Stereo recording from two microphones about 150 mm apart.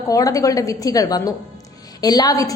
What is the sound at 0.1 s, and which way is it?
A woman's voice, 25° left (ahead or behind).